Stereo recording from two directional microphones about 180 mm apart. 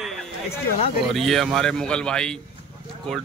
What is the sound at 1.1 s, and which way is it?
Speech, centre (ahead or behind).